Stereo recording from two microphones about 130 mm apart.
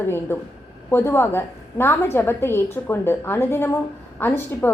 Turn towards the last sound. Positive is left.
turn(degrees=15)  # may be behind; listen again after turning